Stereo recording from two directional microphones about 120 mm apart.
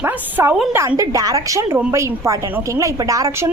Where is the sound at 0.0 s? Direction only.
15° right (ahead or behind).